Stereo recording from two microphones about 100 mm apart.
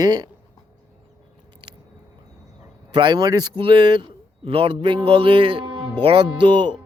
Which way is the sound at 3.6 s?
55° right (ahead or behind).